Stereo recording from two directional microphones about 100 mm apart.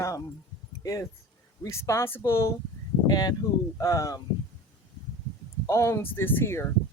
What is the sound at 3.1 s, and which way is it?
Speech, 45° left (ahead or behind).